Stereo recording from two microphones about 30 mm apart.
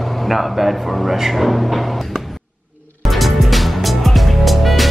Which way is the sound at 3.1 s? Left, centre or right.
Centre.